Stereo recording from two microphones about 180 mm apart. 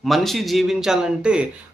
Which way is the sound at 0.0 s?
Centre (ahead or behind).